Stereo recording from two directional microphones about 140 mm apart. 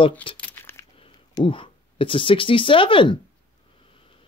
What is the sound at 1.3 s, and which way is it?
Speech, 35° left (ahead or behind).